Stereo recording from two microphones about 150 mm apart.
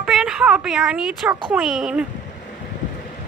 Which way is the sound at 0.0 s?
5° right (ahead or behind).